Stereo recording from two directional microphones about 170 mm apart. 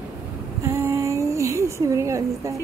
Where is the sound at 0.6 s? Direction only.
15° right (ahead or behind).